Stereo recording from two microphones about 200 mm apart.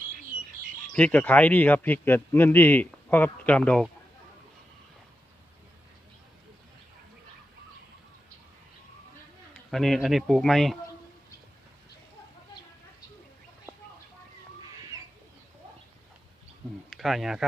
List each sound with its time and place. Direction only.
0.9 s speech: 5° left (ahead or behind)
9.7 s speech: centre (ahead or behind)
16.9 s speech: centre (ahead or behind)